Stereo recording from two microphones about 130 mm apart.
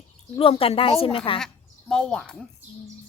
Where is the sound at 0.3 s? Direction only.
45° left (ahead or behind).